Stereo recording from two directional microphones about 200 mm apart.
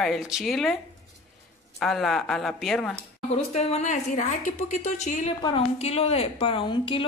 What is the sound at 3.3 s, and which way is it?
A woman's voice, 30° left (ahead or behind).